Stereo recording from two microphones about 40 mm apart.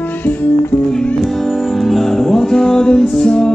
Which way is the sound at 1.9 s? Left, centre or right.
Centre.